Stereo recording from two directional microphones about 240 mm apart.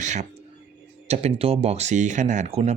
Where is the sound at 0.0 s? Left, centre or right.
Right.